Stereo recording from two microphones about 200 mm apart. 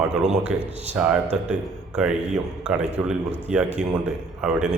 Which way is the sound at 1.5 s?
5° right (ahead or behind).